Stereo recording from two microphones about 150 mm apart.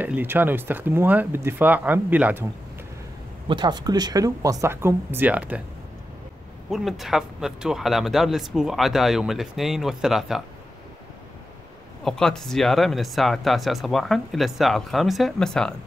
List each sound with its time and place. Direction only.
0.0 s speech: 15° right (ahead or behind)
3.4 s speech: 30° right (ahead or behind); by 5.6 s 10° right (ahead or behind)
6.7 s speech: centre (ahead or behind)
12.0 s speech: 5° left (ahead or behind)